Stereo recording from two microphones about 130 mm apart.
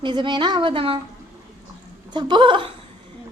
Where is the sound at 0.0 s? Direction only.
35° right (ahead or behind).